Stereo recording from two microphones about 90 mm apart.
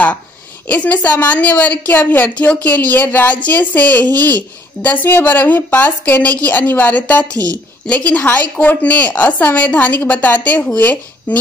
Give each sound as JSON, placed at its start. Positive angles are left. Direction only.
{"t": 0.7, "sound": "a woman's voice", "side_deg": 15}